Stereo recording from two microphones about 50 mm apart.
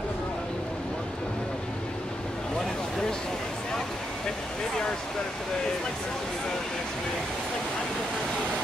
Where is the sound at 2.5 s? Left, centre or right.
Centre.